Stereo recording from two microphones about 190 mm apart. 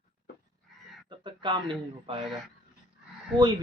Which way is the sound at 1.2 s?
25° right (ahead or behind).